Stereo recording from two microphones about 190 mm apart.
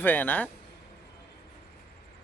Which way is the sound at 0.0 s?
10° left (ahead or behind).